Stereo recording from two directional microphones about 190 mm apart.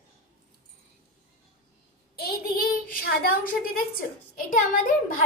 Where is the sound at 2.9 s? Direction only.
50° left (ahead or behind).